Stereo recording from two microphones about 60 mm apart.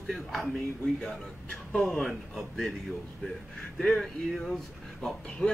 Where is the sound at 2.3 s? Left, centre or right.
Centre.